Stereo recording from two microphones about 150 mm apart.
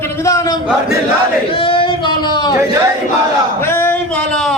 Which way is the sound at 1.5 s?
35° left (ahead or behind).